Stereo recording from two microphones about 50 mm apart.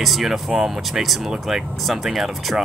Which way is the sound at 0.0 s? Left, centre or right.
Centre.